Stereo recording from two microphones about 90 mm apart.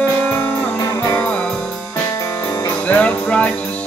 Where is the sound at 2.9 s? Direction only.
15° left (ahead or behind).